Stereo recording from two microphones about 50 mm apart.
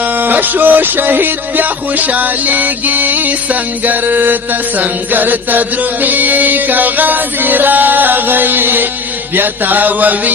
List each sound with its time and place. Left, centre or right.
0.0 s music: right